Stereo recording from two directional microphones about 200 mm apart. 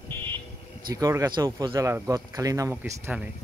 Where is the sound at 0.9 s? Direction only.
15° right (ahead or behind).